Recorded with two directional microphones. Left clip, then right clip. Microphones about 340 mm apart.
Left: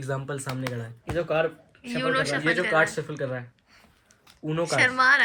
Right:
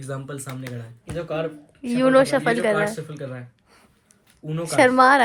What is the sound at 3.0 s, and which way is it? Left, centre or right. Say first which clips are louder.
Speech: left 3 dB; left.